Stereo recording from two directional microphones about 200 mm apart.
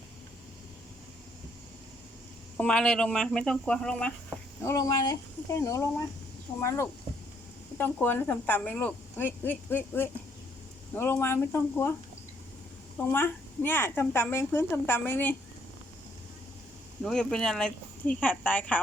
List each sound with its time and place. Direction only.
2.6 s speech: 5° left (ahead or behind)
4.6 s a woman's voice: 15° left (ahead or behind)
13.0 s a woman's voice: 10° left (ahead or behind)
17.0 s speech: centre (ahead or behind)